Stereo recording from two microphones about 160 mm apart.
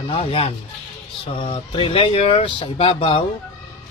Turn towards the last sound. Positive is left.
turn(degrees=35)  # may be behind; listen again after turning